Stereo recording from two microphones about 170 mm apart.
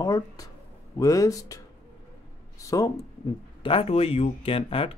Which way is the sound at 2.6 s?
20° left (ahead or behind).